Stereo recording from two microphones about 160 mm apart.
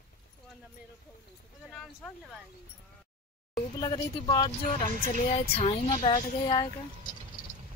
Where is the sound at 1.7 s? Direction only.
Centre (ahead or behind).